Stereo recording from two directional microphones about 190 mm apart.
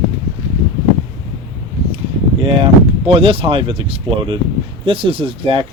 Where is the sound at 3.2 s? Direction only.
30° right (ahead or behind).